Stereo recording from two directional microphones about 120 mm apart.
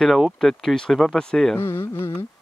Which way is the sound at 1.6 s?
20° left (ahead or behind).